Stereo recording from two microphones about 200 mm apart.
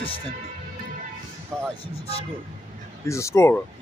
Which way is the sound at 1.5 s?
Centre (ahead or behind).